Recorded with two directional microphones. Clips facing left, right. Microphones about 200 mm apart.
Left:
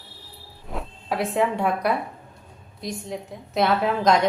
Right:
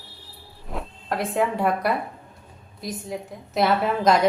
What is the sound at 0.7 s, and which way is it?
A woman's voice, centre (ahead or behind).